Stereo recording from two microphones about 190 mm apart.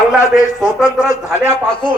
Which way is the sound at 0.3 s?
Centre (ahead or behind).